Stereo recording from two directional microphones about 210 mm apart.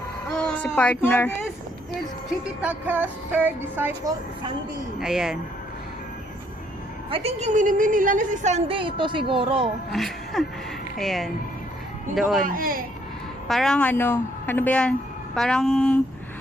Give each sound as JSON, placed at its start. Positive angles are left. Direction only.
{"t": 0.3, "sound": "a woman's voice", "side_deg": 5}
{"t": 2.6, "sound": "speech", "side_deg": -5}
{"t": 4.9, "sound": "speech", "side_deg": 0}
{"t": 7.1, "sound": "a woman's voice", "side_deg": -30}
{"t": 9.9, "sound": "speech", "side_deg": 0}
{"t": 12.5, "sound": "speech", "side_deg": -40}
{"t": 13.5, "sound": "a woman's voice", "side_deg": 0}